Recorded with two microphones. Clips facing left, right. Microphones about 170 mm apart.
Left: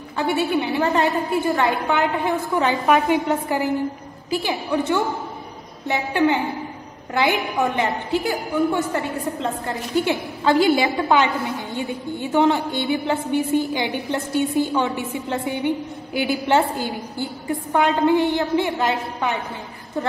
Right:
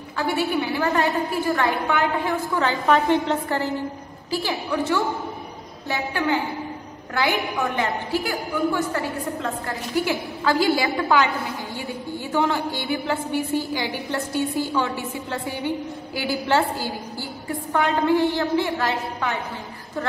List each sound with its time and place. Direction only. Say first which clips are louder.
0.2 s a woman's voice: left 2 dB; 25° left (ahead or behind)
2.9 s a woman's voice: even; 5° left (ahead or behind); by 19.3 s 20° left (ahead or behind)